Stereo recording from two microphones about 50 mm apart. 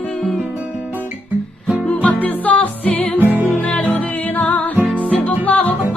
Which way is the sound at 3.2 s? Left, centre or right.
Right.